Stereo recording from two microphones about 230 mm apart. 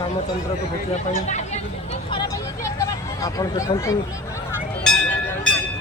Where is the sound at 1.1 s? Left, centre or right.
Left.